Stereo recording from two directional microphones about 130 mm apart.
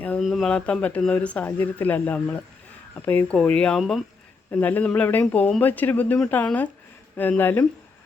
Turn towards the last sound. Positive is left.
turn(degrees=15)  # may be behind; listen again after turning